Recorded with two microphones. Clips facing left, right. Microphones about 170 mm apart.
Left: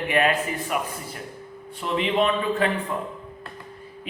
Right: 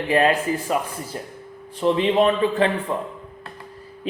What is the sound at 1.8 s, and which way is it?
Speech, 30° right (ahead or behind).